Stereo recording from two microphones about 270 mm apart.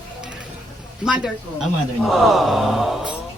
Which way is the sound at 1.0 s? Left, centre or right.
Centre.